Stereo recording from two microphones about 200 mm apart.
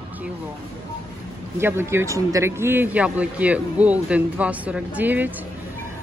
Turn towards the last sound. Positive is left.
turn(degrees=-10)  # may be behind; listen again after turning